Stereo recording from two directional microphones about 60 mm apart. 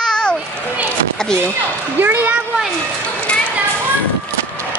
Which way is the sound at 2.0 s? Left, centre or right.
Right.